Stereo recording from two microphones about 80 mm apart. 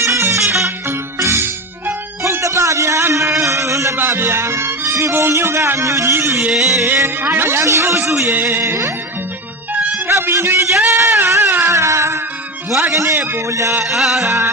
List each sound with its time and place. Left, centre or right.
0.0 s music: right
2.2 s a sound: right
3.9 s music: right
6.5 s music: centre
6.8 s a man's voice: right
10.1 s a sound: right
12.9 s a man's voice: right
13.8 s music: centre
14.3 s a man's voice: right